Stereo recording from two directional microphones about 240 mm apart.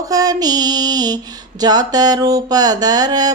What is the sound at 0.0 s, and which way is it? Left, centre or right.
Speech, centre.